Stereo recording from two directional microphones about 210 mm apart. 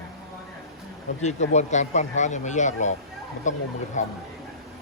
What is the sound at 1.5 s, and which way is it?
Speech, 35° left (ahead or behind).